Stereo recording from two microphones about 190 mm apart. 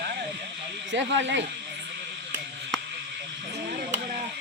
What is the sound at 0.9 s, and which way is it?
Speech, 75° right (ahead or behind).